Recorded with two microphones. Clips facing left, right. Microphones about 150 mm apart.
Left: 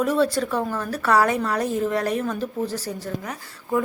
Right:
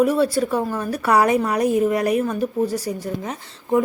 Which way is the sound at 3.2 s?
20° right (ahead or behind).